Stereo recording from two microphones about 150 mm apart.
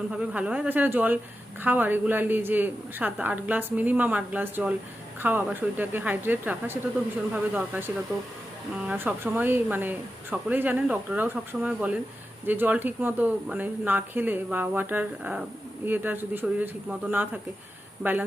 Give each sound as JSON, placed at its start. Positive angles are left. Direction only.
{"t": 0.1, "sound": "a man's voice", "side_deg": -5}
{"t": 8.9, "sound": "a man's voice", "side_deg": -10}